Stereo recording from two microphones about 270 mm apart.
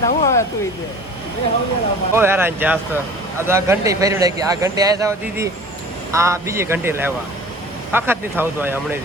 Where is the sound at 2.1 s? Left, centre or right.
Centre.